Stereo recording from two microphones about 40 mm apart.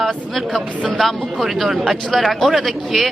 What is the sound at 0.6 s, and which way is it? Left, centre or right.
Speech, right.